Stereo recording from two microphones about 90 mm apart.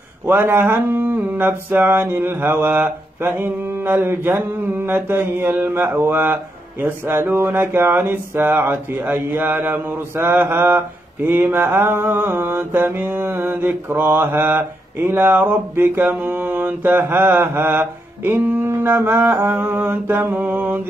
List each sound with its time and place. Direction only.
0.3 s mantra: 25° right (ahead or behind)